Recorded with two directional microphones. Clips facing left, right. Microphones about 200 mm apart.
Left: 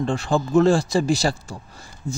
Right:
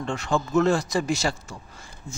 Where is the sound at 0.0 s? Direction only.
35° left (ahead or behind).